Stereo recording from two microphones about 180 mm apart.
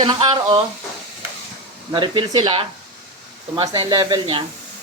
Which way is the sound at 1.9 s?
25° right (ahead or behind).